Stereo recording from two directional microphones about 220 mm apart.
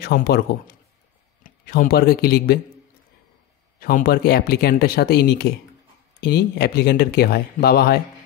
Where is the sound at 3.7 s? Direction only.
40° left (ahead or behind).